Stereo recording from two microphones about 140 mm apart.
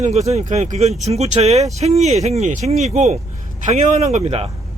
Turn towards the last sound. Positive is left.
turn(degrees=-50)  # may be behind; listen again after turning